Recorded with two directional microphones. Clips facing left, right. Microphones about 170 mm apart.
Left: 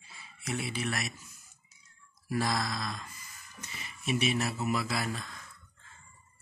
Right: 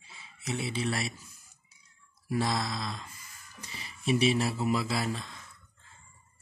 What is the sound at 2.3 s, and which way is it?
Speech, 25° right (ahead or behind).